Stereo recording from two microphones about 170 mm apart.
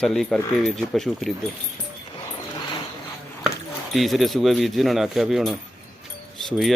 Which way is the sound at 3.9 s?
Centre (ahead or behind).